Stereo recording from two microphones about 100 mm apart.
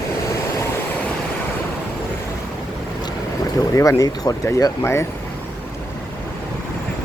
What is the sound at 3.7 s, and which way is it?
Speech, 35° left (ahead or behind).